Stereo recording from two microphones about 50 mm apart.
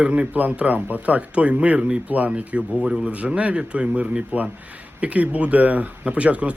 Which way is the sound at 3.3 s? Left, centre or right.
Right.